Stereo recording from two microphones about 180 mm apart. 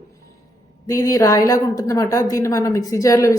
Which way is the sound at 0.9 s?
20° left (ahead or behind).